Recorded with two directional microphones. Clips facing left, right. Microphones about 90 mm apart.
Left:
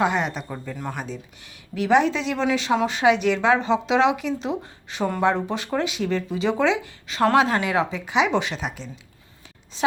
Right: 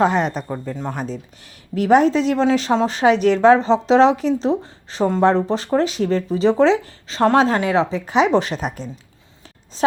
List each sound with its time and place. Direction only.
0.0 s speech: 35° right (ahead or behind)
0.4 s speech: 20° right (ahead or behind)
1.8 s speech: 40° right (ahead or behind)